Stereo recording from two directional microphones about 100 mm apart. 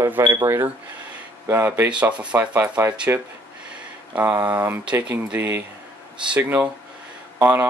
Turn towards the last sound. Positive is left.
turn(degrees=-20)  # may be behind; listen again after turning